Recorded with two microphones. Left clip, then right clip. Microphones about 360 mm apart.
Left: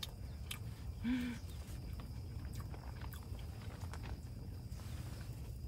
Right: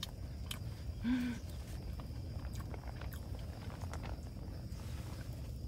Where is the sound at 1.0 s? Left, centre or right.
Centre.